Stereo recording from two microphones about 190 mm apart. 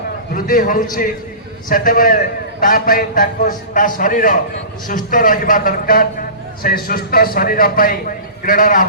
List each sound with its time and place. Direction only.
0.3 s a man's voice: 50° left (ahead or behind)